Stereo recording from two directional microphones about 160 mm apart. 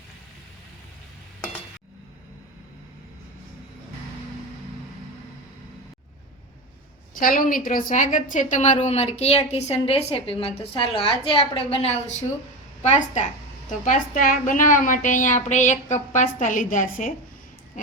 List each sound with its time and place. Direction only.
7.1 s a woman's voice: 60° left (ahead or behind)